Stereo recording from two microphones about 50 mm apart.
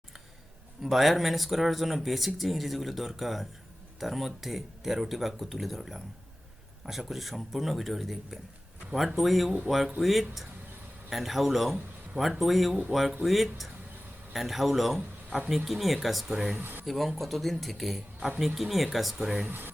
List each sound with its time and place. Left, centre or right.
0.8 s speech: centre
16.6 s speech: right
16.8 s speech: centre
19.5 s speech: right